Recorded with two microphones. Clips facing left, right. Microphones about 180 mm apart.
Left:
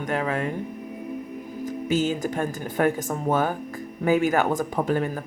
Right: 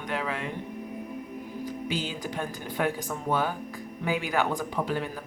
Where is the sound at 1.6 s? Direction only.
45° left (ahead or behind).